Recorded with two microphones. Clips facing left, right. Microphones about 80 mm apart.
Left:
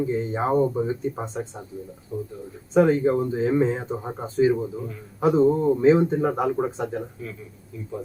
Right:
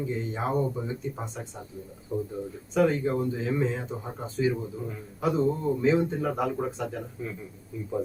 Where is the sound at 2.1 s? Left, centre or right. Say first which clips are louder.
Right 1 dB; centre.